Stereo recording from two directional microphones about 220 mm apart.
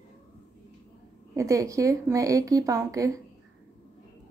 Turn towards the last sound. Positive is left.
turn(degrees=-15)  # may be behind; listen again after turning